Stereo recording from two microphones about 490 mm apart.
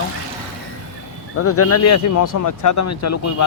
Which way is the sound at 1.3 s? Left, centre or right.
Left.